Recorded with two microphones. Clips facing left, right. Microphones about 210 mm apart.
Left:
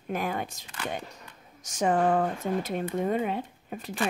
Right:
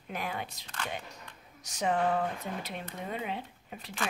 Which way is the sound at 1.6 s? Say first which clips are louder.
Left 5 dB; 45° left (ahead or behind).